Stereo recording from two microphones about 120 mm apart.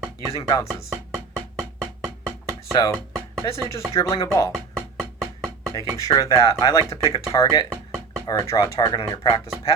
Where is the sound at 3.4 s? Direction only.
35° left (ahead or behind).